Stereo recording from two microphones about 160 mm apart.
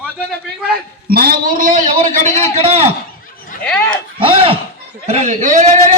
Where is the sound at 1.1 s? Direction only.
65° right (ahead or behind); by 2.8 s 40° right (ahead or behind).